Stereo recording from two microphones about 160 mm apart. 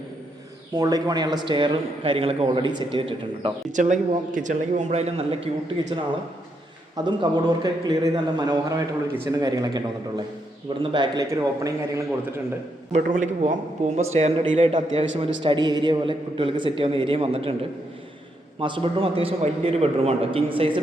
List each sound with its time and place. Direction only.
0.8 s a man's voice: 25° right (ahead or behind)
3.7 s speech: 50° right (ahead or behind)
5.9 s a man's voice: 30° right (ahead or behind)
10.9 s a man's voice: 25° right (ahead or behind)
13.0 s a man's voice: 55° right (ahead or behind); by 17.5 s 35° right (ahead or behind)
18.6 s a man's voice: 30° right (ahead or behind)